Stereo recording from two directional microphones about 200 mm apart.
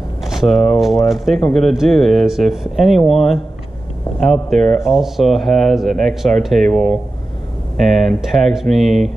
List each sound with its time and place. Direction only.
0.2 s speech: centre (ahead or behind)